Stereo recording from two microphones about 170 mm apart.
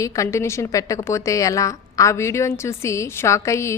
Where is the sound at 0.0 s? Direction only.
15° left (ahead or behind).